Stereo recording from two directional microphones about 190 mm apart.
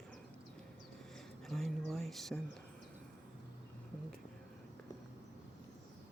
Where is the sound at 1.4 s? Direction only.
Centre (ahead or behind).